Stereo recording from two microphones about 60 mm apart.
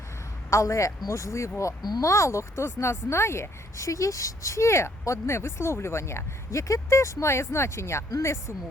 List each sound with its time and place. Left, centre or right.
0.5 s speech: left